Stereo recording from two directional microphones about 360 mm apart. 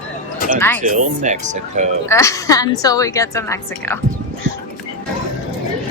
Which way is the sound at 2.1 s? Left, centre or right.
Centre.